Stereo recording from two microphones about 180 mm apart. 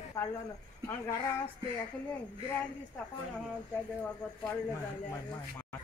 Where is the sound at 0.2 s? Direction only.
20° left (ahead or behind).